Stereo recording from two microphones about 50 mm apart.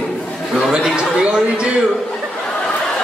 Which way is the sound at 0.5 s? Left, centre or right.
Centre.